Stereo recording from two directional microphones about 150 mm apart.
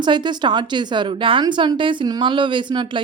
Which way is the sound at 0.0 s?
30° right (ahead or behind).